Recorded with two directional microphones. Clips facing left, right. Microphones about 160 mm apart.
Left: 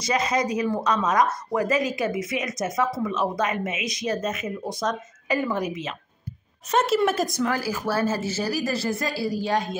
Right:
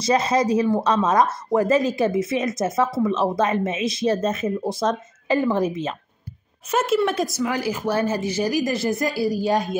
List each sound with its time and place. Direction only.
0.0 s speech: 30° right (ahead or behind)
6.7 s a woman's voice: 5° right (ahead or behind)
7.5 s speech: 20° right (ahead or behind)
9.2 s a woman's voice: 25° left (ahead or behind)